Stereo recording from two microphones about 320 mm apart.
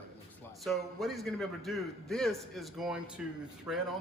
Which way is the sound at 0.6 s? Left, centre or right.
Centre.